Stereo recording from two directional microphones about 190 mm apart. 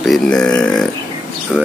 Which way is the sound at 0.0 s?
5° left (ahead or behind).